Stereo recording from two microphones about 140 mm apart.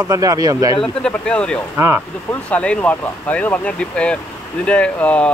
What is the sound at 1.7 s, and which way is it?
Speech, 15° right (ahead or behind).